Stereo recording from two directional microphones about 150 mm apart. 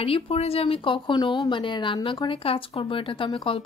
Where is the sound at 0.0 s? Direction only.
40° left (ahead or behind).